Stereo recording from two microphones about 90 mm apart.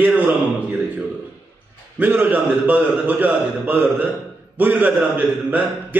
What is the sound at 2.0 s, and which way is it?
Speech, 20° right (ahead or behind).